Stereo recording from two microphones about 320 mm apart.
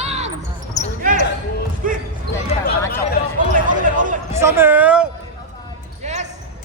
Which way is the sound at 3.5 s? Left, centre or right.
Right.